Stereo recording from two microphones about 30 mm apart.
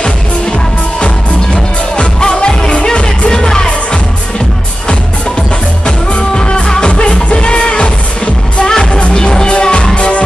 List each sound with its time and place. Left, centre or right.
1.0 s music: left
6.3 s music: left
8.6 s music: left
9.5 s music: left